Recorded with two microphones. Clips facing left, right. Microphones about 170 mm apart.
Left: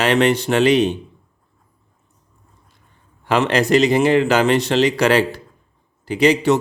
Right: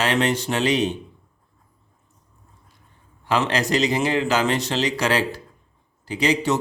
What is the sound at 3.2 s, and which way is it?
Speech, 60° left (ahead or behind).